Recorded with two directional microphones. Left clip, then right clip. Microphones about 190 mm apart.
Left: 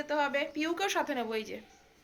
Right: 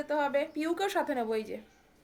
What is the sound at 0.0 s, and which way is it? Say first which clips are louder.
Speech: right 1 dB; 10° right (ahead or behind).